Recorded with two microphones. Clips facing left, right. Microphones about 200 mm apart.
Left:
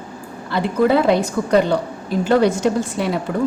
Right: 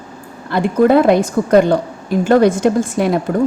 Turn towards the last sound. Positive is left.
turn(degrees=-50)  # may be behind; listen again after turning